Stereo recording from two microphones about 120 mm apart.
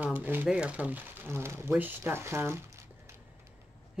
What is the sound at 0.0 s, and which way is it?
Speech, 15° right (ahead or behind).